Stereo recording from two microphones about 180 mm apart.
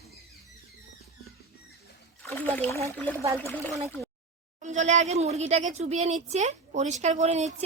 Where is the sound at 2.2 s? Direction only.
10° left (ahead or behind).